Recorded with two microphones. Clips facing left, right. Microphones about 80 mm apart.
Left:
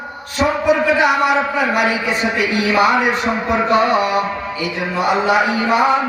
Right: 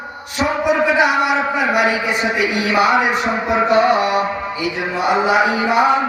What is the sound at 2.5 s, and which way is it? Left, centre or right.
Speech, centre.